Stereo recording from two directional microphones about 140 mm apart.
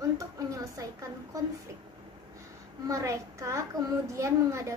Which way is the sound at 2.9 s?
20° right (ahead or behind).